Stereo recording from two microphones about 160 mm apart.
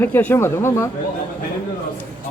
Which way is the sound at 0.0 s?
10° left (ahead or behind).